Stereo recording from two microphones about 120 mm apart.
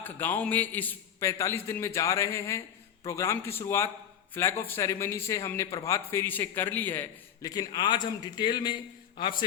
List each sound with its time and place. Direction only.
0.0 s a man's voice: 15° left (ahead or behind)
7.4 s a man's voice: 30° left (ahead or behind)